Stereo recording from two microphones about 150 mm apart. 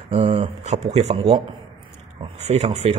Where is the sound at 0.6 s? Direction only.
50° right (ahead or behind).